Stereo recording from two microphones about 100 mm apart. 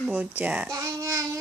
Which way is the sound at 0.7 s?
35° right (ahead or behind).